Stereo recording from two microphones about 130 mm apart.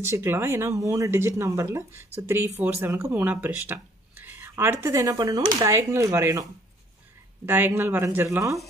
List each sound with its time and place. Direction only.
0.1 s speech: 20° right (ahead or behind)
7.4 s speech: 15° right (ahead or behind)